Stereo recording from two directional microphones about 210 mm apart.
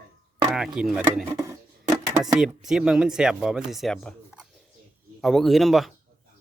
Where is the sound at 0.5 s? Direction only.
Centre (ahead or behind).